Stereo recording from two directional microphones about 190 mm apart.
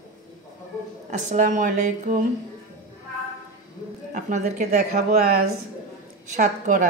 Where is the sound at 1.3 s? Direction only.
40° right (ahead or behind).